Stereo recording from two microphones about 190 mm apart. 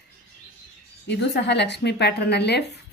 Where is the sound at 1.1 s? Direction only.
65° left (ahead or behind).